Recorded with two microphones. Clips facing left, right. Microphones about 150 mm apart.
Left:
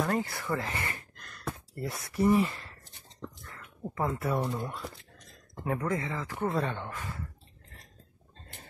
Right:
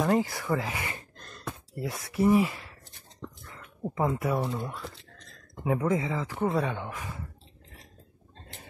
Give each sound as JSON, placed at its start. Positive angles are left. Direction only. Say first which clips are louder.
{"t": 0.0, "sound": "speech", "louder": "right 4 dB", "side_deg": -15}
{"t": 0.9, "sound": "gasp", "louder": "right 3 dB", "side_deg": -30}
{"t": 1.4, "sound": "speech", "louder": "right 1 dB", "side_deg": 0}
{"t": 3.2, "sound": "a sound", "louder": "even", "side_deg": 0}
{"t": 3.5, "sound": "speech", "louder": "right 4 dB", "side_deg": -15}
{"t": 4.4, "sound": "speech", "louder": "right 1 dB", "side_deg": 10}
{"t": 4.8, "sound": "a sound", "louder": "even", "side_deg": 15}
{"t": 5.8, "sound": "speech", "louder": "right 6 dB", "side_deg": -15}